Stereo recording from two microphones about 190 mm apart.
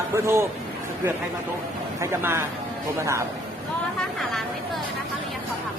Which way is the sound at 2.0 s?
10° right (ahead or behind).